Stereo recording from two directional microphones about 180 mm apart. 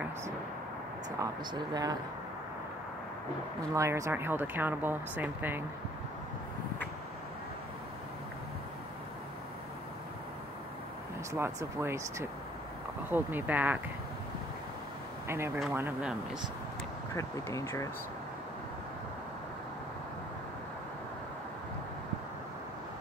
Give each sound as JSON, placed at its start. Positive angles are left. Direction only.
{"t": 1.1, "sound": "speech", "side_deg": -20}
{"t": 3.7, "sound": "speech", "side_deg": -15}
{"t": 11.3, "sound": "speech", "side_deg": -15}
{"t": 15.2, "sound": "speech", "side_deg": -15}
{"t": 17.1, "sound": "speech", "side_deg": 15}